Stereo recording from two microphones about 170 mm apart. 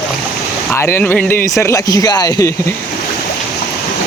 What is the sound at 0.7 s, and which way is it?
Speech, 15° left (ahead or behind).